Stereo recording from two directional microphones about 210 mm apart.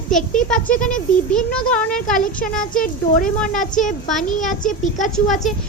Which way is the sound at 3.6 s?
35° left (ahead or behind).